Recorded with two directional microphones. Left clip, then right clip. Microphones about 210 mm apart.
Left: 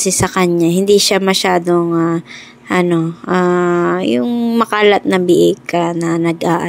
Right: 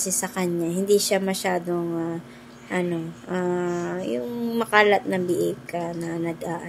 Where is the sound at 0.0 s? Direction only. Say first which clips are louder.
Left 13 dB; 35° left (ahead or behind).